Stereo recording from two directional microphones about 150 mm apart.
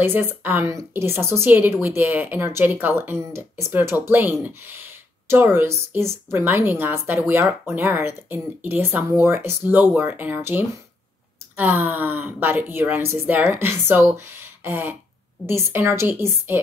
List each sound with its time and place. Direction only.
0.0 s a woman's voice: 15° right (ahead or behind)